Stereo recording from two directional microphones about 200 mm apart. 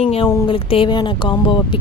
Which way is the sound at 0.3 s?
20° left (ahead or behind).